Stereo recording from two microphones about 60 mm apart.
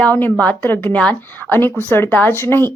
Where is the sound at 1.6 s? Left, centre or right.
Left.